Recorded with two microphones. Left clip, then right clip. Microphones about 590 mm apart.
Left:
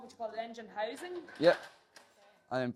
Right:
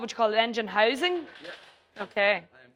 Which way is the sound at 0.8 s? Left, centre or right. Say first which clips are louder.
Right 14 dB; right.